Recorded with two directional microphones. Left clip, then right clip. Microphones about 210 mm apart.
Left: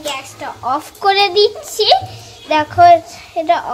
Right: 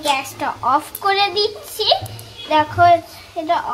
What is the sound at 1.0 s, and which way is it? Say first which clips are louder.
A child's voice: left 9 dB; 35° left (ahead or behind).